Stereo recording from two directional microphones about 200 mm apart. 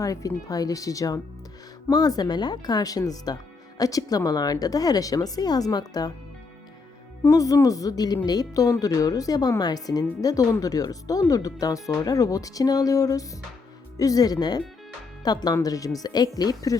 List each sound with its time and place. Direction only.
0.0 s a woman's voice: 15° left (ahead or behind)
7.3 s a woman's voice: 15° left (ahead or behind)